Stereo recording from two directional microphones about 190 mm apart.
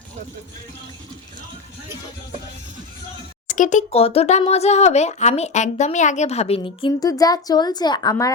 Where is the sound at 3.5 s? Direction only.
40° left (ahead or behind).